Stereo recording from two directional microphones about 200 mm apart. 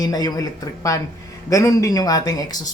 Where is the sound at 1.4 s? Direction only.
15° left (ahead or behind).